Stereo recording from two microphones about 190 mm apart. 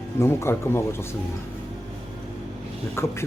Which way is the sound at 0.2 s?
15° left (ahead or behind).